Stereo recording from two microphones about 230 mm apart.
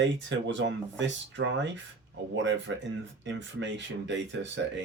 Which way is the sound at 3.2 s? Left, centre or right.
Right.